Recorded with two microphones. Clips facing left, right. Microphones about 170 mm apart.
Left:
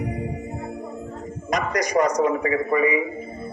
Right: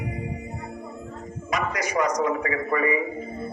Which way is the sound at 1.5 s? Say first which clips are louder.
Left 4 dB; 40° left (ahead or behind).